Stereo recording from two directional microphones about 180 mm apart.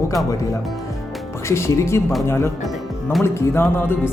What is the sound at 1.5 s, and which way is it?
Speech, 15° left (ahead or behind).